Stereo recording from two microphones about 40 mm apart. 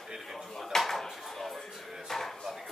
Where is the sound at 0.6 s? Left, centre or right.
Centre.